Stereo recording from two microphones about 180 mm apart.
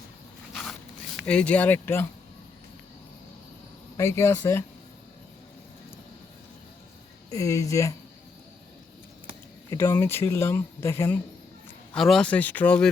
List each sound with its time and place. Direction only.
0.5 s zipper: centre (ahead or behind)
3.9 s speech: 15° left (ahead or behind)
7.3 s speech: 20° left (ahead or behind)
9.6 s speech: 15° left (ahead or behind)
11.9 s speech: centre (ahead or behind)